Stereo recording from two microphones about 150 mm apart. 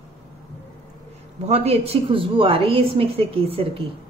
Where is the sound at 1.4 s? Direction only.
45° right (ahead or behind).